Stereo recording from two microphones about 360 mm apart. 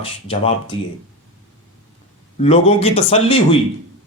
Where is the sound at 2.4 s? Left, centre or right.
Centre.